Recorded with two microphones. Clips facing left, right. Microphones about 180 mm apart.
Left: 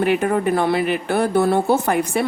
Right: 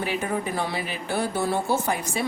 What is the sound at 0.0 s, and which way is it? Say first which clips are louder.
A woman's voice: left 9 dB; 60° left (ahead or behind).